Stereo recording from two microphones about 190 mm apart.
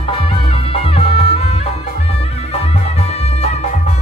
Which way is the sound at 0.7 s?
30° left (ahead or behind).